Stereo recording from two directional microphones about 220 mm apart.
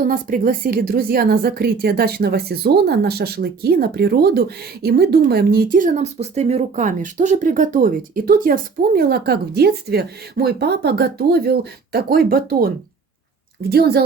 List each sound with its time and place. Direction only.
0.0 s a woman's voice: 40° right (ahead or behind)